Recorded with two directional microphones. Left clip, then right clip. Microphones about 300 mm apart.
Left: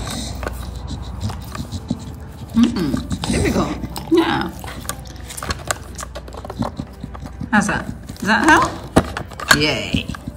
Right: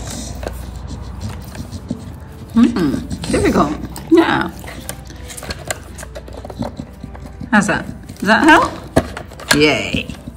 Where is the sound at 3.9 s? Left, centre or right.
Centre.